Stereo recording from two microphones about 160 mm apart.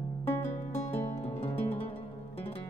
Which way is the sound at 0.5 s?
45° left (ahead or behind).